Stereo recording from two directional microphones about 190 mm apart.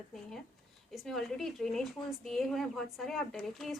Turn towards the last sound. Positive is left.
turn(degrees=0)  # may be behind; listen again after turning